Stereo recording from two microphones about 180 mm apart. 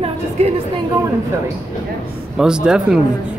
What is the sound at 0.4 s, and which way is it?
Speech, 35° right (ahead or behind).